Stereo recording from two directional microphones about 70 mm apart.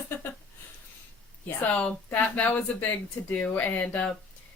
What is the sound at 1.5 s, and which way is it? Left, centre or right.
A woman's voice, left.